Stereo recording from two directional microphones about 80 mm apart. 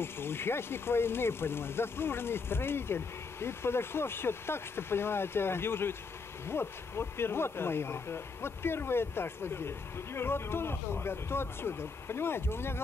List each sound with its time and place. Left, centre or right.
0.0 s speech: left